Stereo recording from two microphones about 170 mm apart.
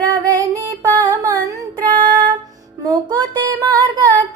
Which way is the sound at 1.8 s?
50° right (ahead or behind).